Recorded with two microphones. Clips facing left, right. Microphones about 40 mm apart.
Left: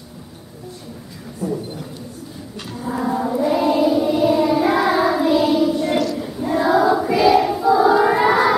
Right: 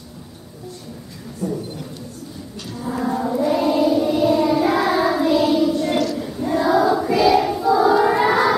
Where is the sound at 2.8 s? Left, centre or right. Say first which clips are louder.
Left 1 dB; centre.